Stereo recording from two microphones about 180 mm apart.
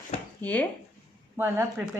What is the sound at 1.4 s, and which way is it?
Speech, 10° right (ahead or behind).